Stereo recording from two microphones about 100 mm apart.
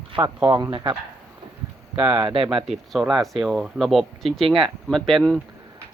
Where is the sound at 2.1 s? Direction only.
65° right (ahead or behind).